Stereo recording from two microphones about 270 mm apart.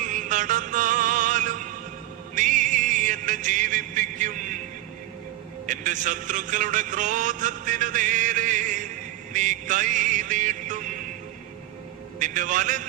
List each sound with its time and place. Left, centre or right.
0.0 s music: right
5.6 s a man's voice: right
9.3 s music: right
12.2 s a man's voice: right